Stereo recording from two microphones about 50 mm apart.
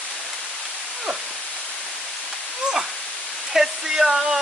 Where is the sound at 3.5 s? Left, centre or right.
Centre.